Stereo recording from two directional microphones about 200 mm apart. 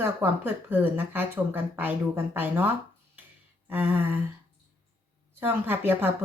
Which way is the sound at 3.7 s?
10° right (ahead or behind).